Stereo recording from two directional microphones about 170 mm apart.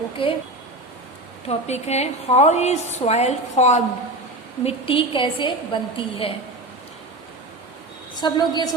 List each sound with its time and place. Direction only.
0.2 s a woman's voice: 35° left (ahead or behind)
1.5 s a woman's voice: 40° left (ahead or behind)
8.1 s a woman's voice: 25° left (ahead or behind)